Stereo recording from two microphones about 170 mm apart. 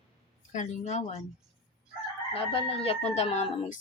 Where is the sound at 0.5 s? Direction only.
45° left (ahead or behind).